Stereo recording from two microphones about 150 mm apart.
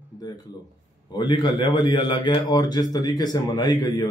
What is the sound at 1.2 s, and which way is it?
A man's voice, 30° left (ahead or behind).